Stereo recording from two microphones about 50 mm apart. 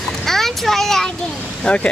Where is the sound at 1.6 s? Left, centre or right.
Left.